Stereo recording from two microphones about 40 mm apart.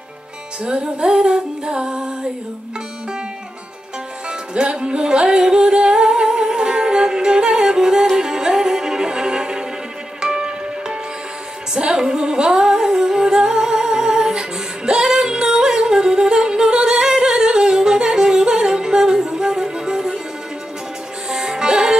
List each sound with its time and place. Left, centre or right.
0.7 s music: right
4.6 s music: right
11.7 s humming: centre
14.9 s yodeling: centre
21.3 s music: centre